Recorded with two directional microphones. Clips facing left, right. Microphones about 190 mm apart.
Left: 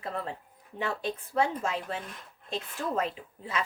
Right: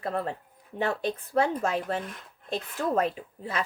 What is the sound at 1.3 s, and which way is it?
Speech, 50° right (ahead or behind).